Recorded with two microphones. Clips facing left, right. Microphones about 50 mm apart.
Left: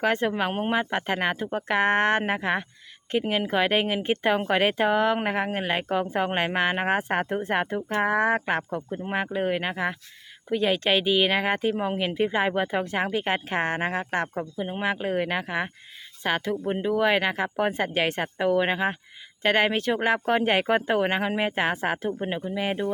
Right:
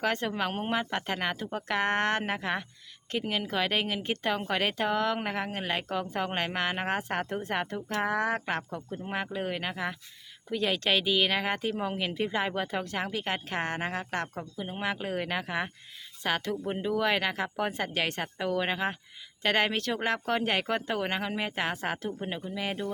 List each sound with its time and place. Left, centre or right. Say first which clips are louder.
0.0 s speech: left 5 dB; centre